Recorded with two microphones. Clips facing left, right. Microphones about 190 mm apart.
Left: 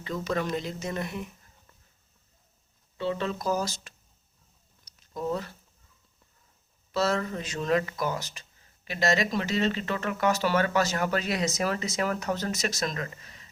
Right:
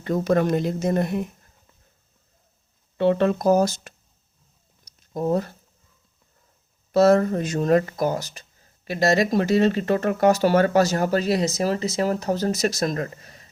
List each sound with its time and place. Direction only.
0.0 s speech: 50° right (ahead or behind)
3.0 s speech: 60° right (ahead or behind)
5.1 s speech: 50° right (ahead or behind)
6.9 s speech: 50° right (ahead or behind)